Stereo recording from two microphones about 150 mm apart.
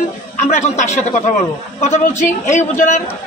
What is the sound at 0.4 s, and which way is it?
Speech, 55° left (ahead or behind).